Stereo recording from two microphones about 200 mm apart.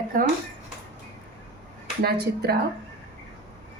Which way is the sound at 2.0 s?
50° right (ahead or behind).